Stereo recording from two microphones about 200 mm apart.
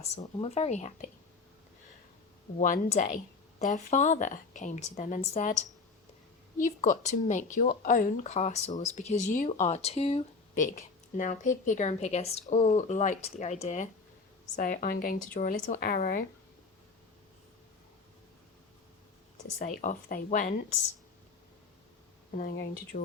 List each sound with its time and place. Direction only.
0.0 s speech: 30° left (ahead or behind)
2.6 s a woman's voice: 40° left (ahead or behind)
19.5 s speech: 40° left (ahead or behind)
22.4 s a woman's voice: 45° left (ahead or behind)